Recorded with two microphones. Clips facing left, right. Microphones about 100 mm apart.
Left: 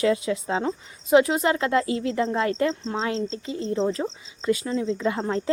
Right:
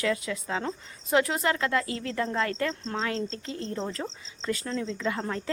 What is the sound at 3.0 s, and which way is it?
Speech, 25° left (ahead or behind).